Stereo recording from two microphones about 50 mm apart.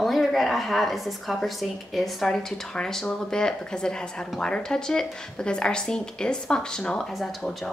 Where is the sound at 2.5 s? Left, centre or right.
Centre.